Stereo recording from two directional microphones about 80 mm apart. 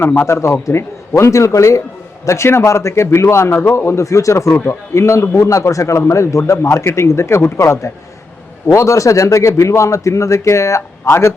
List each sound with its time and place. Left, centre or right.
0.0 s speech: left
0.3 s a man's voice: left